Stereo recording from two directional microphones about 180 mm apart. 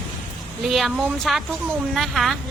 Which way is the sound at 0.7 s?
Centre (ahead or behind).